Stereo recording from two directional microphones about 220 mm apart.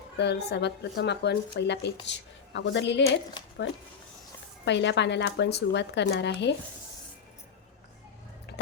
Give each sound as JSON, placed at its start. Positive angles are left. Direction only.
{"t": 0.2, "sound": "speech", "side_deg": 50}
{"t": 4.6, "sound": "speech", "side_deg": 50}
{"t": 8.5, "sound": "a sound", "side_deg": 50}